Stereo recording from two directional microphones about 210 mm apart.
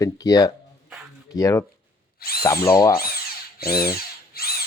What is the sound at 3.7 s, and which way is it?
Drill, 45° left (ahead or behind).